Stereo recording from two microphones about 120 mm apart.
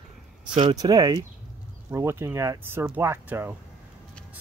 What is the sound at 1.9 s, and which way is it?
Speech, 20° right (ahead or behind).